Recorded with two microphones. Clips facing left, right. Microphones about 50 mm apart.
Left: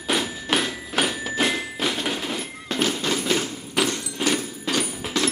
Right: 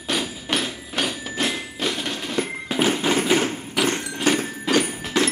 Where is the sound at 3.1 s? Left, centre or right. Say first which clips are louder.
Right 4 dB; right.